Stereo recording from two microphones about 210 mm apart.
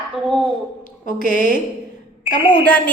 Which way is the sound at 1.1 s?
40° left (ahead or behind).